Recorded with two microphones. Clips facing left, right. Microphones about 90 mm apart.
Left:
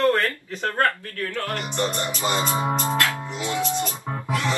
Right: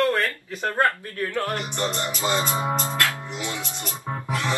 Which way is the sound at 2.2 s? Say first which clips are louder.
Left 1 dB; 20° left (ahead or behind).